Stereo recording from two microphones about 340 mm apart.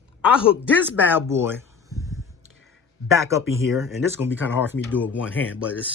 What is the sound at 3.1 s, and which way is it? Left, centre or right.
Speech, centre.